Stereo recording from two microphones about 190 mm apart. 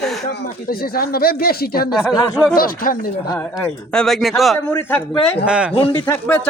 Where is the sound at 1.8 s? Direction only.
25° left (ahead or behind).